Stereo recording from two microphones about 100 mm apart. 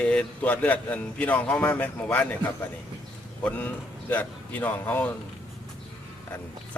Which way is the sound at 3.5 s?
15° left (ahead or behind).